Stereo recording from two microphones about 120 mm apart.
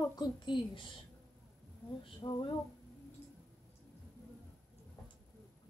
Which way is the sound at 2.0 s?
45° left (ahead or behind).